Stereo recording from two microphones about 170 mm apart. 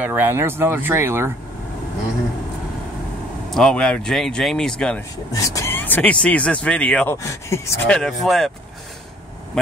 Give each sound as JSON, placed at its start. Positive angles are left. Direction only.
{"t": 0.0, "sound": "speech", "side_deg": -10}
{"t": 3.5, "sound": "speech", "side_deg": 5}
{"t": 5.3, "sound": "speech", "side_deg": 20}
{"t": 7.9, "sound": "speech", "side_deg": 0}